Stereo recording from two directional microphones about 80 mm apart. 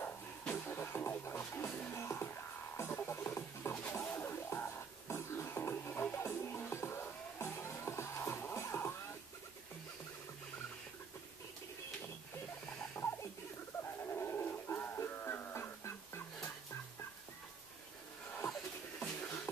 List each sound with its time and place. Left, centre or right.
0.0 s music: left
3.7 s music: centre
13.0 s rodents: left
14.0 s music: left
18.9 s music: centre